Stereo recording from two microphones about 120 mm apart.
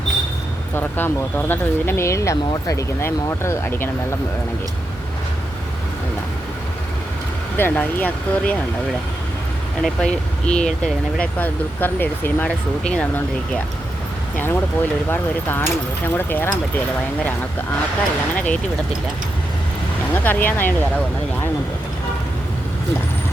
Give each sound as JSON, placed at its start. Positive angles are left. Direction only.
{"t": 0.8, "sound": "speech", "side_deg": 15}
{"t": 7.5, "sound": "speech", "side_deg": 15}
{"t": 9.8, "sound": "speech", "side_deg": 5}
{"t": 18.3, "sound": "speech", "side_deg": 10}
{"t": 20.2, "sound": "speech", "side_deg": 15}